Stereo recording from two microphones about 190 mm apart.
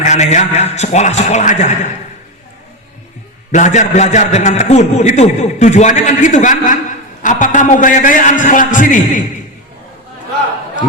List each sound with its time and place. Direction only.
0.0 s a man's voice: 40° left (ahead or behind)
3.5 s a man's voice: 40° left (ahead or behind)